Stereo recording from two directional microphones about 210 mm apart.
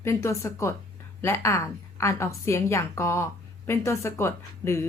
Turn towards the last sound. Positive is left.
turn(degrees=10)  # may be behind; listen again after turning